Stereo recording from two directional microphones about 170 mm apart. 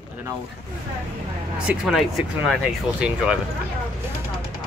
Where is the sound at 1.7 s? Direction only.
Centre (ahead or behind).